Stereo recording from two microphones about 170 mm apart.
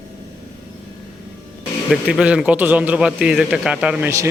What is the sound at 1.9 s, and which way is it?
A man's voice, 5° right (ahead or behind).